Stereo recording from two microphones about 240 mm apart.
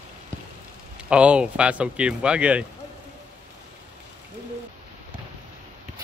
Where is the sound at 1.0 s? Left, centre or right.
Centre.